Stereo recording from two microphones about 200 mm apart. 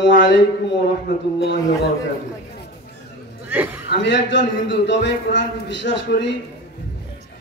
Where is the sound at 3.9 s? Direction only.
60° left (ahead or behind).